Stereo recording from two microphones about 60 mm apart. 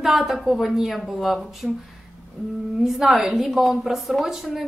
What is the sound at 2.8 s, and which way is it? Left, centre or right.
Speech, centre.